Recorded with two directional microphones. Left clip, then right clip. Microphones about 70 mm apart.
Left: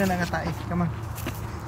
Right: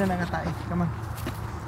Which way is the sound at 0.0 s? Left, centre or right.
Left.